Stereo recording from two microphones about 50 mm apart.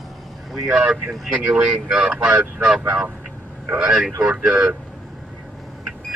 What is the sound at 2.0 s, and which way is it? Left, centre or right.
Speech, right.